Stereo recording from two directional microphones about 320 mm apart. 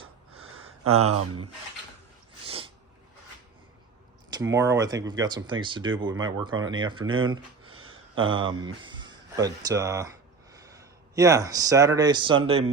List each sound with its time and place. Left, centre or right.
0.0 s a sound: right
2.5 s sneeze: centre
4.3 s speech: centre